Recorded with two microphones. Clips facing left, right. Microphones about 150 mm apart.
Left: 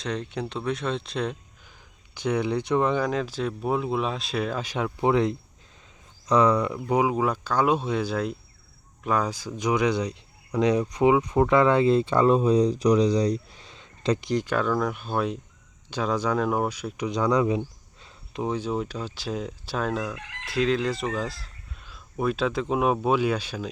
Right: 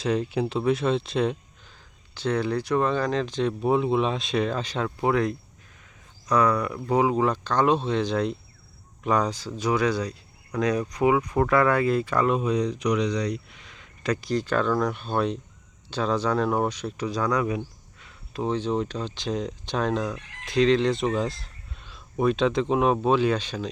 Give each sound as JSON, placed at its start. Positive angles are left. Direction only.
{"t": 0.0, "sound": "speech", "side_deg": -5}
{"t": 2.1, "sound": "speech", "side_deg": 15}
{"t": 5.0, "sound": "speech", "side_deg": 20}
{"t": 17.1, "sound": "speech", "side_deg": 20}